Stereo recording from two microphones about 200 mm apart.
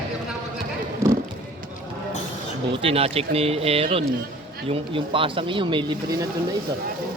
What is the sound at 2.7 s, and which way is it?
Speech, 30° right (ahead or behind).